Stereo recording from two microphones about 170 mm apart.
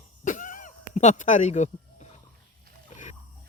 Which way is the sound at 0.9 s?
45° left (ahead or behind).